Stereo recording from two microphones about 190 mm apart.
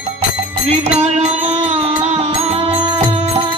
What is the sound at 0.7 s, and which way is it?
Music, 35° right (ahead or behind).